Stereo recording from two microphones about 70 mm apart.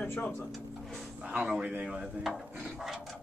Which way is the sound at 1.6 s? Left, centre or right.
Right.